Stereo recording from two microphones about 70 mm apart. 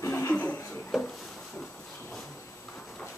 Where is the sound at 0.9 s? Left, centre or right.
Centre.